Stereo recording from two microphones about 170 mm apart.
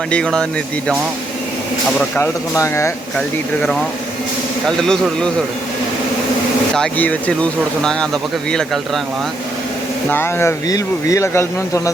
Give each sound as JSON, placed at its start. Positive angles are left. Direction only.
{"t": 0.1, "sound": "speech", "side_deg": 5}
{"t": 2.0, "sound": "speech", "side_deg": 10}
{"t": 3.2, "sound": "speech", "side_deg": 5}
{"t": 4.8, "sound": "speech", "side_deg": 5}
{"t": 6.7, "sound": "speech", "side_deg": 5}
{"t": 10.1, "sound": "speech", "side_deg": 15}